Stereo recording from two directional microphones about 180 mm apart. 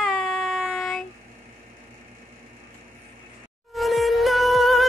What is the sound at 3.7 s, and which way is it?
Music, centre (ahead or behind).